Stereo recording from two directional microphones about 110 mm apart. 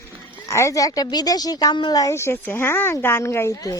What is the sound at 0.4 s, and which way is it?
A woman's voice, 25° left (ahead or behind).